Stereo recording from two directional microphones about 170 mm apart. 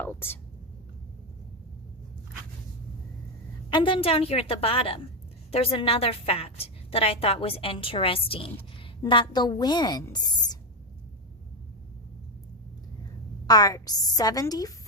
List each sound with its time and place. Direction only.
0.0 s speech: 10° left (ahead or behind)
3.7 s a woman's voice: 30° left (ahead or behind)
13.5 s a woman's voice: 20° left (ahead or behind)